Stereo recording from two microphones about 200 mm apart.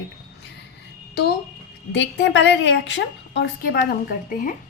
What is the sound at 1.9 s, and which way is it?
Speech, 65° left (ahead or behind).